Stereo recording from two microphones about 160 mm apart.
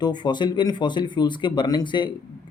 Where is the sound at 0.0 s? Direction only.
30° left (ahead or behind).